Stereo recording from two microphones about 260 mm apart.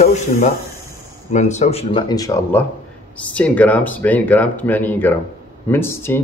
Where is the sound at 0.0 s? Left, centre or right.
Left.